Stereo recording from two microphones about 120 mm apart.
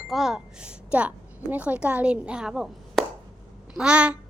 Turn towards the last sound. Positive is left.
turn(degrees=-10)  # may be behind; listen again after turning